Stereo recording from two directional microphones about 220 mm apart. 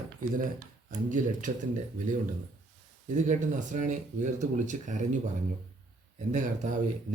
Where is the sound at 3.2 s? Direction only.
35° right (ahead or behind).